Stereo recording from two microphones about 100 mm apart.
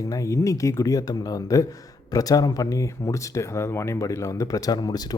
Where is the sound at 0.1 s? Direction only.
35° left (ahead or behind).